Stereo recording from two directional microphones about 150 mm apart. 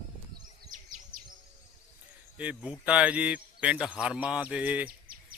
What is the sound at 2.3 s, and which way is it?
Speech, 10° right (ahead or behind).